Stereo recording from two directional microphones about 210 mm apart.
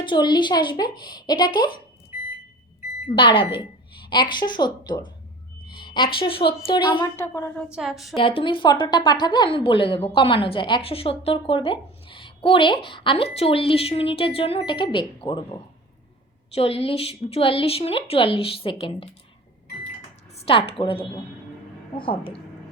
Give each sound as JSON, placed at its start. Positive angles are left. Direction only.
{"t": 0.0, "sound": "a woman's voice", "side_deg": 20}
{"t": 3.2, "sound": "a woman's voice", "side_deg": 25}
{"t": 7.7, "sound": "a woman's voice", "side_deg": 0}
{"t": 8.2, "sound": "a woman's voice", "side_deg": 25}
{"t": 16.6, "sound": "a woman's voice", "side_deg": 30}
{"t": 20.3, "sound": "a woman's voice", "side_deg": 25}